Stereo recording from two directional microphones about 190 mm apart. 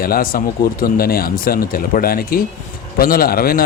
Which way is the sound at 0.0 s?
50° left (ahead or behind).